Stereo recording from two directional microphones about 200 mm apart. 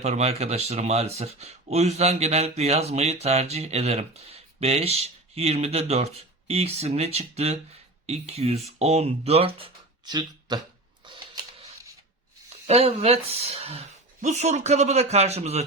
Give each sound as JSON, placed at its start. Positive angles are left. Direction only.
{"t": 0.0, "sound": "speech", "side_deg": -35}
{"t": 11.0, "sound": "a sound", "side_deg": -25}
{"t": 12.6, "sound": "speech", "side_deg": -30}